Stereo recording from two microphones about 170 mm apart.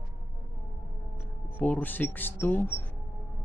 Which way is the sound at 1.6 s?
10° left (ahead or behind).